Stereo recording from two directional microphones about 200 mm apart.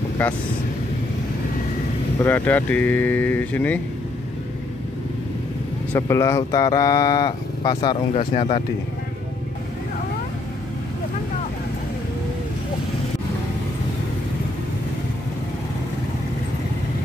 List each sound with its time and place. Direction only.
0.2 s speech: 5° left (ahead or behind)
2.1 s speech: 10° left (ahead or behind)
5.9 s speech: 15° left (ahead or behind)